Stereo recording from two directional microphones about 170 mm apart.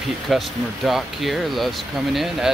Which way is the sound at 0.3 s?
Centre (ahead or behind).